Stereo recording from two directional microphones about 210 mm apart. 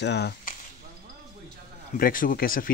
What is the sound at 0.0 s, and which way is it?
Speech, 50° left (ahead or behind).